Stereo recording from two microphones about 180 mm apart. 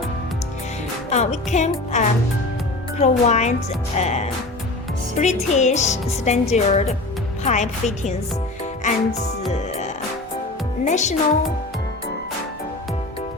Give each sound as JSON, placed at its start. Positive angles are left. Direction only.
{"t": 1.1, "sound": "speech", "side_deg": 40}
{"t": 9.5, "sound": "music", "side_deg": 40}
{"t": 10.8, "sound": "speech", "side_deg": 40}